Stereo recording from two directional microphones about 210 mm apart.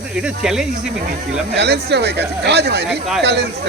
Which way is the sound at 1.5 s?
55° right (ahead or behind).